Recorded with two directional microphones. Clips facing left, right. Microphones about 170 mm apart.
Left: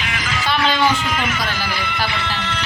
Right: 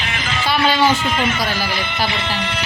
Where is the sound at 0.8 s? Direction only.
25° right (ahead or behind).